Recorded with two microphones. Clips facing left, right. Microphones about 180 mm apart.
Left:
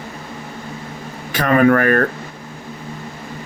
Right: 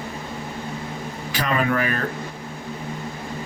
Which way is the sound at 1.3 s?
55° left (ahead or behind).